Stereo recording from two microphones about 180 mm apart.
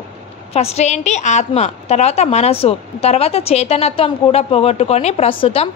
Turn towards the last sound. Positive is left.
turn(degrees=30)  # may be behind; listen again after turning